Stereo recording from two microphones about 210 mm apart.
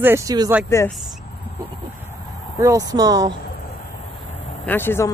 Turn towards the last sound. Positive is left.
turn(degrees=10)  # may be behind; listen again after turning